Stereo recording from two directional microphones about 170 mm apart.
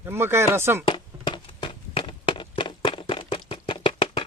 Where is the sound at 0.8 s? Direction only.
30° left (ahead or behind).